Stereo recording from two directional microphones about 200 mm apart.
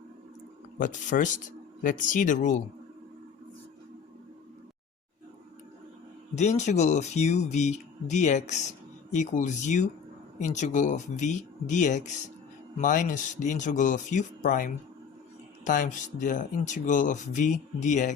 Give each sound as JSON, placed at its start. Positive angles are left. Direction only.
{"t": 0.8, "sound": "speech", "side_deg": 40}
{"t": 6.3, "sound": "speech", "side_deg": 35}